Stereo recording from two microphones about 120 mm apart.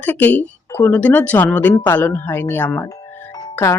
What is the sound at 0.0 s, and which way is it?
Speech, 15° left (ahead or behind).